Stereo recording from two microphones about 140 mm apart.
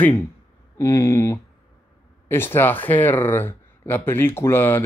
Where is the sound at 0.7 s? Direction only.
20° left (ahead or behind).